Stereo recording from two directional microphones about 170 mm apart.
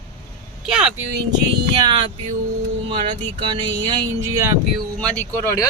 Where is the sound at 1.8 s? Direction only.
25° right (ahead or behind).